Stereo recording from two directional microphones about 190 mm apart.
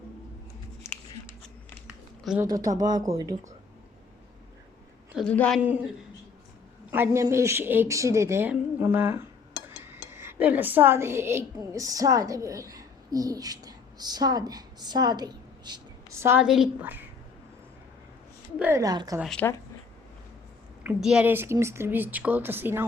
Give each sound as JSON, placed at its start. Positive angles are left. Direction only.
{"t": 2.4, "sound": "speech", "side_deg": -20}
{"t": 5.1, "sound": "a woman's voice", "side_deg": 5}
{"t": 5.5, "sound": "speech", "side_deg": -10}
{"t": 6.9, "sound": "speech", "side_deg": -10}
{"t": 18.6, "sound": "speech", "side_deg": -15}
{"t": 19.2, "sound": "a woman's voice", "side_deg": 5}
{"t": 20.8, "sound": "speech", "side_deg": -5}